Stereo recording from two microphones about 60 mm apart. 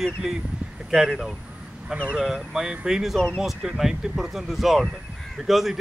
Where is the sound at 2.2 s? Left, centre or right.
Centre.